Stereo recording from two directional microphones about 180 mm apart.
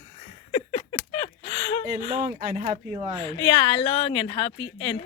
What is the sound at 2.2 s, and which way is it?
Speech, 45° right (ahead or behind).